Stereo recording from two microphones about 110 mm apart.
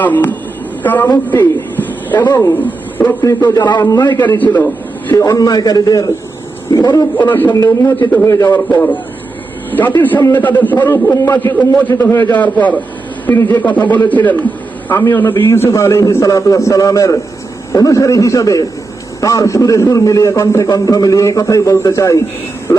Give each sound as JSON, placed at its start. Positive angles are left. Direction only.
{"t": 0.0, "sound": "a man's voice", "side_deg": 15}
{"t": 3.2, "sound": "a man's voice", "side_deg": 30}
{"t": 4.4, "sound": "a man's voice", "side_deg": 15}
{"t": 5.1, "sound": "a man's voice", "side_deg": 30}
{"t": 7.2, "sound": "a man's voice", "side_deg": 15}
{"t": 7.5, "sound": "a man's voice", "side_deg": 30}
{"t": 7.9, "sound": "a man's voice", "side_deg": 15}
{"t": 8.3, "sound": "a man's voice", "side_deg": 30}
{"t": 8.5, "sound": "a man's voice", "side_deg": 15}